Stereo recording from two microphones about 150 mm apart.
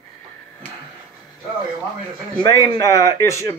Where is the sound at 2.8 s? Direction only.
20° left (ahead or behind).